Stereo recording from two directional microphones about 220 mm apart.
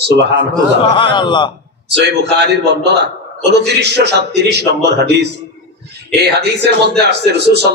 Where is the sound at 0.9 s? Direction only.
20° left (ahead or behind).